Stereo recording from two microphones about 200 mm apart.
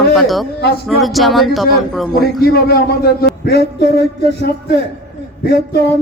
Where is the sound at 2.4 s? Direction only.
50° left (ahead or behind).